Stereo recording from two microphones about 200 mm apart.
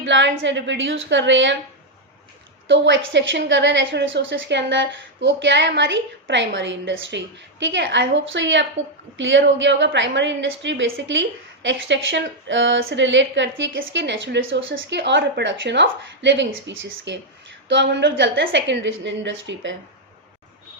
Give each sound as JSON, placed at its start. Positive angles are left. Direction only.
{"t": 0.0, "sound": "a woman's voice", "side_deg": -65}
{"t": 2.6, "sound": "a woman's voice", "side_deg": -65}